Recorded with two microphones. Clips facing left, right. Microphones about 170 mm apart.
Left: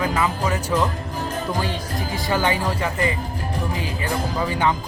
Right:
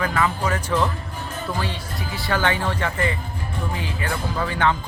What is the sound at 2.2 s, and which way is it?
Speech, 10° left (ahead or behind).